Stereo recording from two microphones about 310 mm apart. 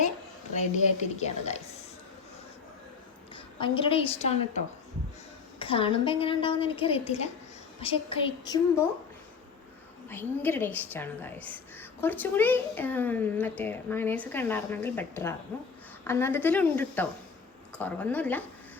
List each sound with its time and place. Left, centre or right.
0.5 s a woman's voice: left
3.3 s a woman's voice: centre
10.1 s a woman's voice: centre